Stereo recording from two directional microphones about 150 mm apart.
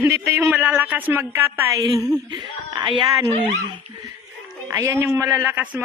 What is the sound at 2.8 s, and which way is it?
Speech, 30° right (ahead or behind).